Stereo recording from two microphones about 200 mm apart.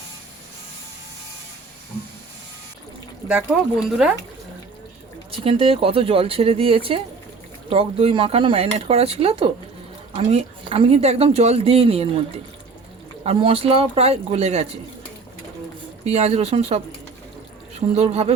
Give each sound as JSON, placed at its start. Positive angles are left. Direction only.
{"t": 3.5, "sound": "speech", "side_deg": -5}
{"t": 5.3, "sound": "speech", "side_deg": -25}
{"t": 13.2, "sound": "a man's voice", "side_deg": -30}
{"t": 16.0, "sound": "a man's voice", "side_deg": -30}